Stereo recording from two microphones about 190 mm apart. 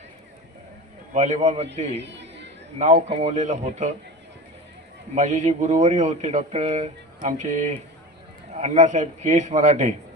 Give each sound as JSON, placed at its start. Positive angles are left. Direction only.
{"t": 1.1, "sound": "speech", "side_deg": -40}
{"t": 2.0, "sound": "music", "side_deg": -65}
{"t": 2.7, "sound": "speech", "side_deg": -35}
{"t": 5.1, "sound": "speech", "side_deg": -40}